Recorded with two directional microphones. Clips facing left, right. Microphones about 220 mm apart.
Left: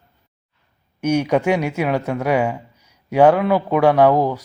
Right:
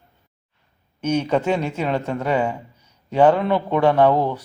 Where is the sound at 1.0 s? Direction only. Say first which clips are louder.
Left 3 dB; 10° left (ahead or behind).